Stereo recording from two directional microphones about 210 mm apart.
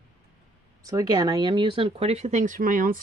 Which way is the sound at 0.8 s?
15° right (ahead or behind).